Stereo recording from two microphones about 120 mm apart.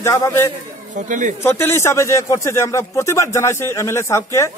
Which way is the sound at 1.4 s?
20° left (ahead or behind).